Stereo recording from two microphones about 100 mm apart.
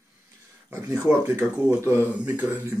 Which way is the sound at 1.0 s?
15° right (ahead or behind).